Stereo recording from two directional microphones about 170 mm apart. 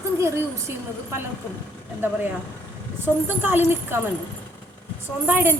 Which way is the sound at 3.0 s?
10° right (ahead or behind).